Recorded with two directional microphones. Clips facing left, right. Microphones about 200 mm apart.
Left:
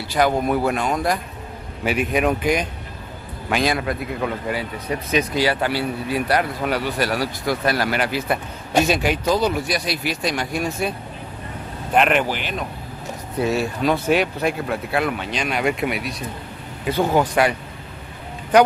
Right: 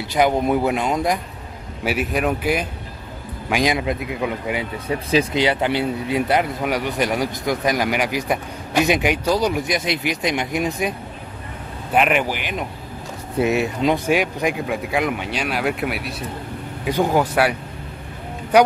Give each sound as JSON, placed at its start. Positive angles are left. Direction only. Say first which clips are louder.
{"t": 0.1, "sound": "speech", "louder": "right 1 dB", "side_deg": -20}
{"t": 1.9, "sound": "speech", "louder": "left 1 dB", "side_deg": -5}
{"t": 4.8, "sound": "speech", "louder": "right 3 dB", "side_deg": -25}
{"t": 11.9, "sound": "speech", "louder": "even", "side_deg": -5}